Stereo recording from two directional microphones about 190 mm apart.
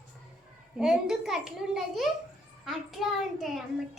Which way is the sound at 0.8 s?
5° right (ahead or behind).